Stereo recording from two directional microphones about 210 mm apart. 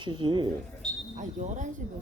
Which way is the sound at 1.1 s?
35° right (ahead or behind).